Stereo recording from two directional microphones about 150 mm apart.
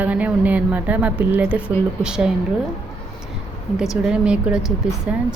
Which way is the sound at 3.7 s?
5° right (ahead or behind).